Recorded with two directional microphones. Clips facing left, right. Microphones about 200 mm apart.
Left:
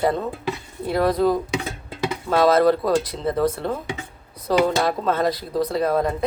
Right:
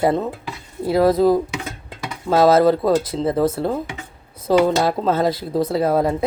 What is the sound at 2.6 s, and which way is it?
Speech, 25° right (ahead or behind).